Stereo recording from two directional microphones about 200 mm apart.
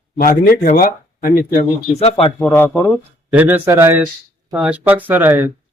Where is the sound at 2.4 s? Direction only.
10° left (ahead or behind).